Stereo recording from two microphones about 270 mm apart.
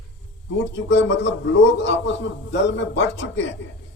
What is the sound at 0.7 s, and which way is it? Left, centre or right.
Speech, left.